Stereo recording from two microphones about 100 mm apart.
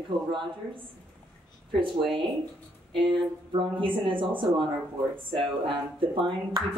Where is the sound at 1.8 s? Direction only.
60° right (ahead or behind).